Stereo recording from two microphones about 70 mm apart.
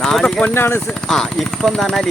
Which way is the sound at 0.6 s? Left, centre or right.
Left.